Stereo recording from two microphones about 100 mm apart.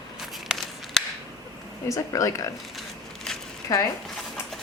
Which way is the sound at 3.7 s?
40° left (ahead or behind).